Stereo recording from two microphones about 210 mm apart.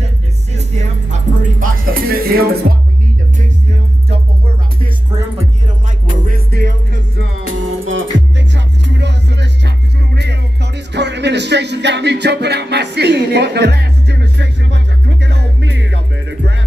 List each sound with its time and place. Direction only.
1.1 s music: 40° right (ahead or behind)
6.0 s music: 40° right (ahead or behind); by 16.5 s 60° right (ahead or behind)